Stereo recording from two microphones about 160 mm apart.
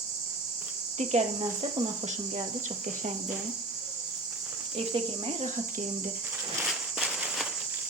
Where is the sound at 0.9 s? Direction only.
45° right (ahead or behind).